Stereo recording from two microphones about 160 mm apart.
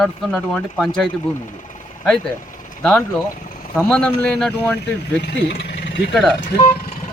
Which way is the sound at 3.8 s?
5° left (ahead or behind).